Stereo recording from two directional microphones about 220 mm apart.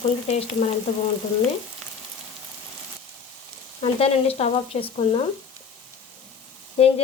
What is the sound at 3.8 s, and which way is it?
A woman's voice, 25° left (ahead or behind).